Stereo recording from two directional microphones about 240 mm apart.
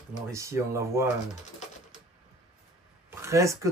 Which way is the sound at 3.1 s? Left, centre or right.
Centre.